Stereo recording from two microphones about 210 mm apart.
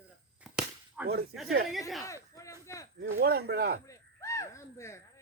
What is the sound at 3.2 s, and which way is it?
Speech, 50° right (ahead or behind).